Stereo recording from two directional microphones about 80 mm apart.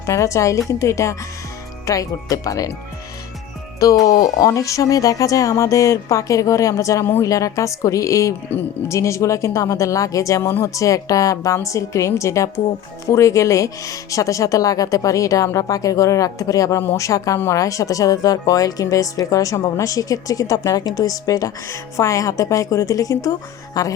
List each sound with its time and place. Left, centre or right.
0.0 s a woman's voice: left
4.1 s speech: left
7.0 s speech: left
7.3 s speech: left
8.5 s speech: left
8.9 s a woman's voice: left